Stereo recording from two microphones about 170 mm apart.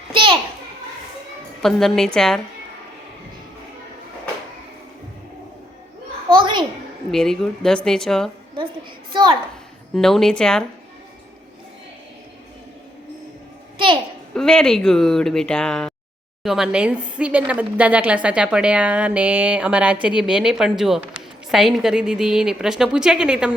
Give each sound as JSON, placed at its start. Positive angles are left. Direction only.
{"t": 0.1, "sound": "a child's voice", "side_deg": -30}
{"t": 1.6, "sound": "a woman's voice", "side_deg": 0}
{"t": 6.3, "sound": "a child's voice", "side_deg": -30}
{"t": 7.1, "sound": "a woman's voice", "side_deg": 5}
{"t": 9.1, "sound": "a child's voice", "side_deg": -25}
{"t": 9.9, "sound": "a woman's voice", "side_deg": 0}
{"t": 13.7, "sound": "a sound", "side_deg": -30}
{"t": 14.3, "sound": "a woman's voice", "side_deg": 5}